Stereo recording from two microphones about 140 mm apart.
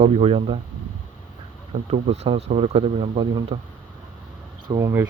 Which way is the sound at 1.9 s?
50° right (ahead or behind).